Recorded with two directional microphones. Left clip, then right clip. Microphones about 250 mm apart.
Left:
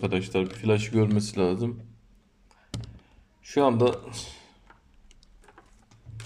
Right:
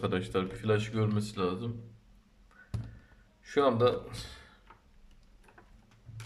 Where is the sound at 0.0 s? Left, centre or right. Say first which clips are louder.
Left 5 dB; centre; by 1.7 s left.